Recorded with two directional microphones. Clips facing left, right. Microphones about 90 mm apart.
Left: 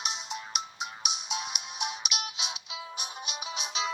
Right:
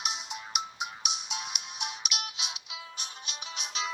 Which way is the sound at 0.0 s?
5° right (ahead or behind).